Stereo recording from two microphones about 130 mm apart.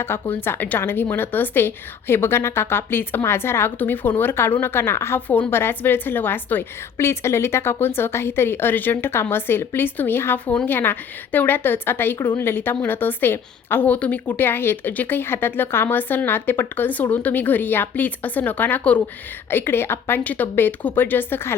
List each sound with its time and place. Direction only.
0.0 s a woman's voice: 15° left (ahead or behind)